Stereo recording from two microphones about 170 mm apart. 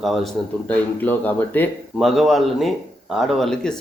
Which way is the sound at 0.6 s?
10° left (ahead or behind).